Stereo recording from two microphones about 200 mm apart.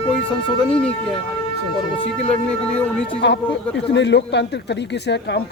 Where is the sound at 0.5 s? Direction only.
5° left (ahead or behind).